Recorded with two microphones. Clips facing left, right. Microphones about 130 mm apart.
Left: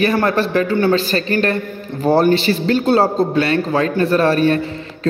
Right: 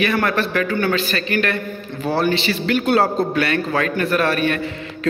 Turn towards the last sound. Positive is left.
turn(degrees=30)  # may be behind; listen again after turning